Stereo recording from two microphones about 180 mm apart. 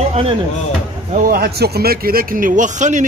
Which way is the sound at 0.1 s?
30° right (ahead or behind).